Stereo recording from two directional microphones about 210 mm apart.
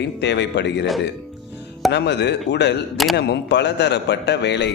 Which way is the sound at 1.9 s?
55° left (ahead or behind).